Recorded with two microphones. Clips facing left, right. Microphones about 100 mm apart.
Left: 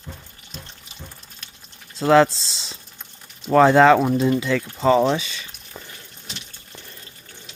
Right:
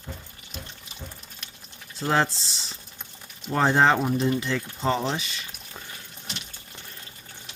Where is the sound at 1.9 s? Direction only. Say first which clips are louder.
Left 9 dB; 90° left.